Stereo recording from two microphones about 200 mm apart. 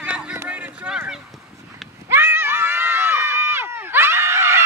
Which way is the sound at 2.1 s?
10° right (ahead or behind).